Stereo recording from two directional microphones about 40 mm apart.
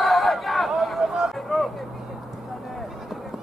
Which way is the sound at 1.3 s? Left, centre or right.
Centre.